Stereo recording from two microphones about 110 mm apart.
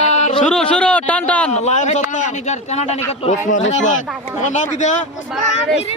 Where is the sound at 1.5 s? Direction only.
90° left.